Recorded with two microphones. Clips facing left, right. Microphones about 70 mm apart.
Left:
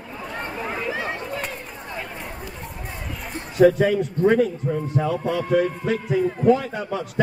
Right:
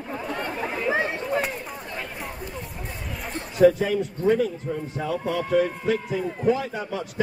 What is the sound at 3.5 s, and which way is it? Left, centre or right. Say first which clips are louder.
Speech: left 2 dB; centre.